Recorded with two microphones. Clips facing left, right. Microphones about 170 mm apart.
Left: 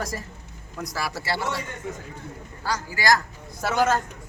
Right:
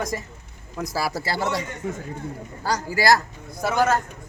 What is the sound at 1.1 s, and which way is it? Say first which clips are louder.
Speech: right 3 dB; 45° right (ahead or behind).